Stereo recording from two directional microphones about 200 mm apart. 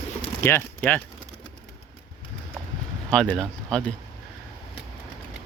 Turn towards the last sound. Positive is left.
turn(degrees=5)  # may be behind; listen again after turning